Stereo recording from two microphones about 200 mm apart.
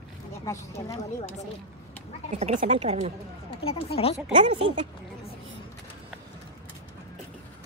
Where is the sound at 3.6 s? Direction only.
30° left (ahead or behind).